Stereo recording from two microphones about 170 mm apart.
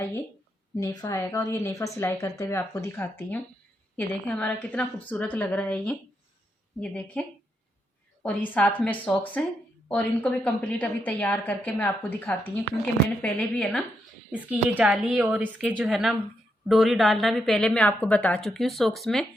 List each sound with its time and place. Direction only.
0.8 s a woman's voice: 20° left (ahead or behind); by 13.8 s 5° left (ahead or behind)
14.3 s a woman's voice: 10° right (ahead or behind)